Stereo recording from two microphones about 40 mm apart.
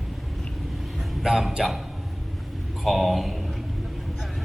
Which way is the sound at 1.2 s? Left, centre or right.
Centre.